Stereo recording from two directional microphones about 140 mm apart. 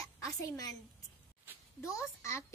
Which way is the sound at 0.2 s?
25° left (ahead or behind).